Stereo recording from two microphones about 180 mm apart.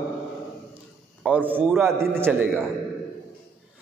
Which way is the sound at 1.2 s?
10° right (ahead or behind).